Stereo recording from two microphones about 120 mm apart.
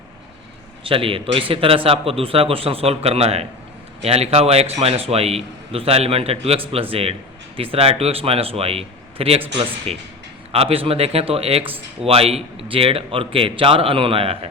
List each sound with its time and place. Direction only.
0.9 s a man's voice: 50° right (ahead or behind)